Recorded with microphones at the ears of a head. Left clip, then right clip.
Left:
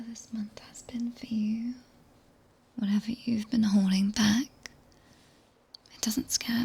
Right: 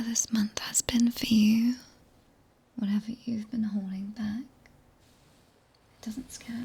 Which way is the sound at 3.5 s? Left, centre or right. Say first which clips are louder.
Left 7 dB; left.